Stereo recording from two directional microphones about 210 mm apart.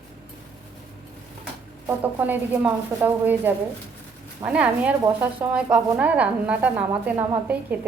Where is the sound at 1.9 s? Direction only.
10° right (ahead or behind).